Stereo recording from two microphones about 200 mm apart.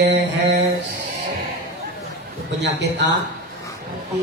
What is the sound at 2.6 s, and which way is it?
Speech, 60° right (ahead or behind).